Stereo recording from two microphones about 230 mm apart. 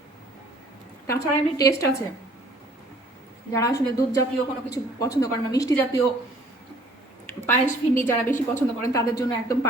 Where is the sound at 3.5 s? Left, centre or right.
Centre.